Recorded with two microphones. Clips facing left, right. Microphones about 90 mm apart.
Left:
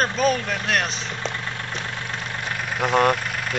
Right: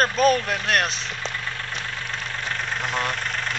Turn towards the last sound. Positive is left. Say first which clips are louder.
# even
turn(degrees=10)  # may be behind; listen again after turning